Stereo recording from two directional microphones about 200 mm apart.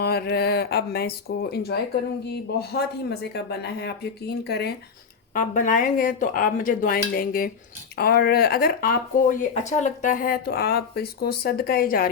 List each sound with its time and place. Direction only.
0.0 s speech: 50° left (ahead or behind)
5.3 s speech: 40° left (ahead or behind)